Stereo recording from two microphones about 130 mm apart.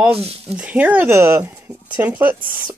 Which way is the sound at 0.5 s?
10° right (ahead or behind).